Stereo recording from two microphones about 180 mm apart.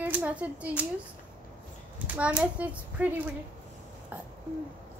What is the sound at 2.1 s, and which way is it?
A child's voice, 5° right (ahead or behind).